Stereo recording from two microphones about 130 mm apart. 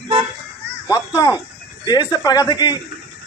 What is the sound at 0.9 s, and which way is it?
A man's voice, 30° left (ahead or behind).